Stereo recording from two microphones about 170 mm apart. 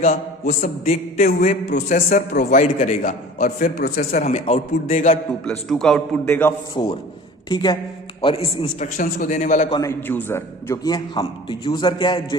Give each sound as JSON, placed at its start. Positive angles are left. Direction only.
{"t": 0.0, "sound": "a man's voice", "side_deg": 45}
{"t": 1.2, "sound": "a man's voice", "side_deg": 55}
{"t": 3.8, "sound": "speech", "side_deg": 60}
{"t": 4.3, "sound": "a man's voice", "side_deg": 40}
{"t": 5.5, "sound": "a man's voice", "side_deg": 0}
{"t": 6.2, "sound": "a man's voice", "side_deg": 10}
{"t": 6.8, "sound": "a man's voice", "side_deg": 30}
{"t": 8.8, "sound": "a man's voice", "side_deg": 55}
{"t": 9.6, "sound": "a man's voice", "side_deg": 25}
{"t": 9.9, "sound": "a man's voice", "side_deg": 10}